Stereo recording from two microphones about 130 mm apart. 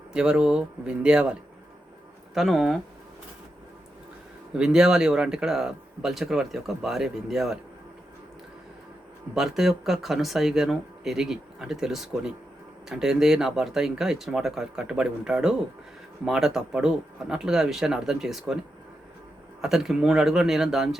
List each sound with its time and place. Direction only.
0.1 s speech: 5° right (ahead or behind)
4.5 s speech: 5° right (ahead or behind)
9.3 s speech: 5° right (ahead or behind)
19.6 s speech: 5° right (ahead or behind)